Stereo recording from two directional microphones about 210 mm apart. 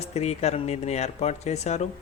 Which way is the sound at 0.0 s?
30° left (ahead or behind).